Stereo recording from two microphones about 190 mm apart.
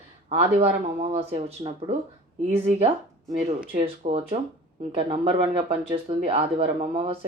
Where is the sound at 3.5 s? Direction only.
35° right (ahead or behind).